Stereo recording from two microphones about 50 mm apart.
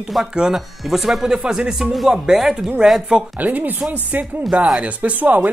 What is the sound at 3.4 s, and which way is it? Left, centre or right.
Speech, right.